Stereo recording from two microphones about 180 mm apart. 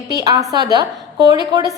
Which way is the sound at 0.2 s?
20° right (ahead or behind).